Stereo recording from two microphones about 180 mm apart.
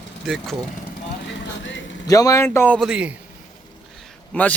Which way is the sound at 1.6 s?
90° left.